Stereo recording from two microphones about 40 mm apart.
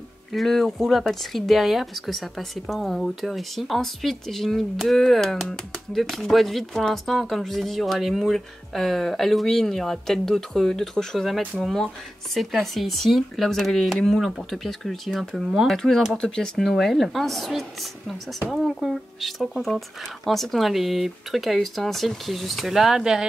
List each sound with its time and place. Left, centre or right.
0.3 s speech: centre
16.2 s speech: centre
16.6 s speech: centre
19.5 s speech: centre